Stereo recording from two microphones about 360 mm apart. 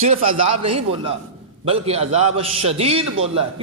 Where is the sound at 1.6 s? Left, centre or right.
Centre.